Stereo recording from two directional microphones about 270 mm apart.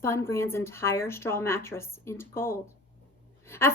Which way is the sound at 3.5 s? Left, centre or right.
Centre.